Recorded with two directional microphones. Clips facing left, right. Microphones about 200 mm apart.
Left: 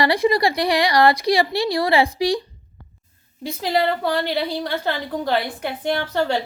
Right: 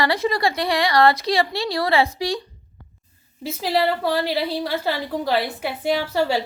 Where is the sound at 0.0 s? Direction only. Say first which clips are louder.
Left 3 dB; 15° left (ahead or behind).